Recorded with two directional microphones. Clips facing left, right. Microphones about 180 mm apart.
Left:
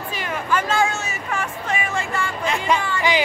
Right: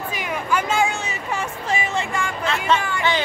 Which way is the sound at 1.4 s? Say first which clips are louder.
Right 2 dB; 25° right (ahead or behind).